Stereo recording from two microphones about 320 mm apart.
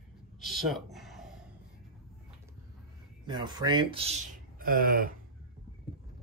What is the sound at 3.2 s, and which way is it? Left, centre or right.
Speech, centre.